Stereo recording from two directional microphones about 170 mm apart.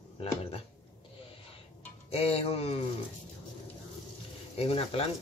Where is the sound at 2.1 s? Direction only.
35° left (ahead or behind).